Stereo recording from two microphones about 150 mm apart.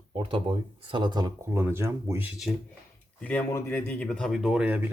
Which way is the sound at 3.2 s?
10° left (ahead or behind).